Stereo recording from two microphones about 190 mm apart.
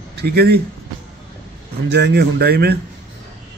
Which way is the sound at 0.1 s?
55° right (ahead or behind).